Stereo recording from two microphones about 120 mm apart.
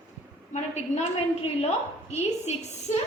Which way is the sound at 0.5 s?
70° left (ahead or behind).